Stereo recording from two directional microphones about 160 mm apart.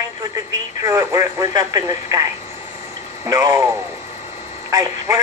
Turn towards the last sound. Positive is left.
turn(degrees=-20)  # may be behind; listen again after turning